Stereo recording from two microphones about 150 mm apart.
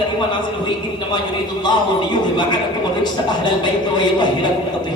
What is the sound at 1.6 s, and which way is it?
A man's voice, 30° left (ahead or behind).